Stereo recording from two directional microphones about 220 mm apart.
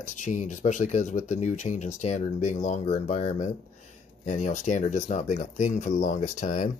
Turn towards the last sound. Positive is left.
turn(degrees=35)  # may be behind; listen again after turning